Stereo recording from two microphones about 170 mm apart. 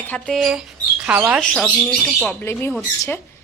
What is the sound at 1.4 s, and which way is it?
A woman's voice, 5° left (ahead or behind).